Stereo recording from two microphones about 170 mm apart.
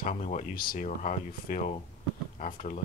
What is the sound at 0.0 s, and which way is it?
Speech, 45° left (ahead or behind).